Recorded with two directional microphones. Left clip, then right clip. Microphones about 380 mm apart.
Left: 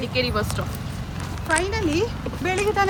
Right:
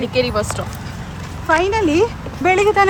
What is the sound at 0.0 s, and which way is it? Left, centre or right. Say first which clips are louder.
Speech: right 6 dB; centre.